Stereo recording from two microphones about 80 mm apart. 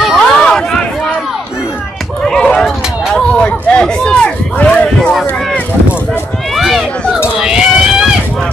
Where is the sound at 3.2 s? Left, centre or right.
Centre.